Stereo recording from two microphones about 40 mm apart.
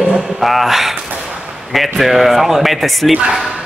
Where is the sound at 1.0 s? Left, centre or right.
Right.